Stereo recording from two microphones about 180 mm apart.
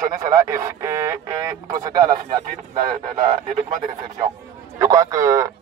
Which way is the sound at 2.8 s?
45° right (ahead or behind).